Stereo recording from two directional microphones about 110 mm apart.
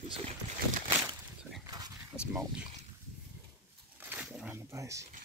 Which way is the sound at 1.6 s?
35° right (ahead or behind).